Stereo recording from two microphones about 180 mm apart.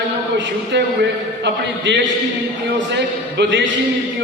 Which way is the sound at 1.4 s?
75° right (ahead or behind).